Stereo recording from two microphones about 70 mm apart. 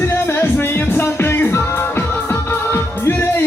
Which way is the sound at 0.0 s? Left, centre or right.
Left.